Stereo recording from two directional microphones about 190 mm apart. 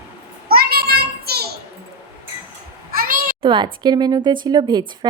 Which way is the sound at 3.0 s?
45° right (ahead or behind).